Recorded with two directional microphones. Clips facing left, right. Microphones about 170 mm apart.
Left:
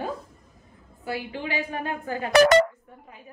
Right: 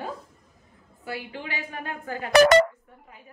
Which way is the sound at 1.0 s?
25° left (ahead or behind).